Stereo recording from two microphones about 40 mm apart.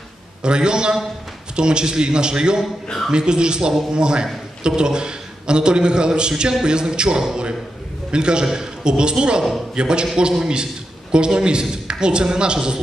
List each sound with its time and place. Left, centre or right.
0.4 s a man's voice: right